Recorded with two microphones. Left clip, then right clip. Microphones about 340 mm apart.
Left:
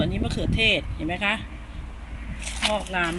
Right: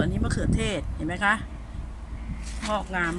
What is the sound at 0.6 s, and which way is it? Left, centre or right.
Speech, right.